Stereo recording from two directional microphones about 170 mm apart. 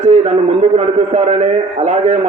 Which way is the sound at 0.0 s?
40° right (ahead or behind).